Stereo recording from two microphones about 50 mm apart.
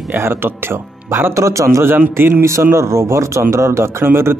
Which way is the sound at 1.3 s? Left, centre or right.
Right.